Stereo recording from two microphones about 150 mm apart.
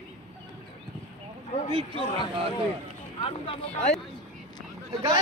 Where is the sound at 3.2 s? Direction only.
40° left (ahead or behind).